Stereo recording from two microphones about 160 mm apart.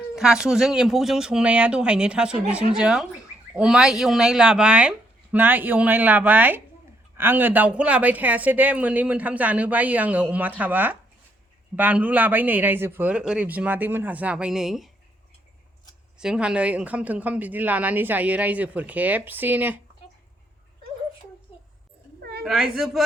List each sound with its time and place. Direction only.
0.2 s speech: 5° right (ahead or behind)
16.2 s speech: 5° right (ahead or behind)
22.2 s a sound: 80° right
22.4 s speech: centre (ahead or behind)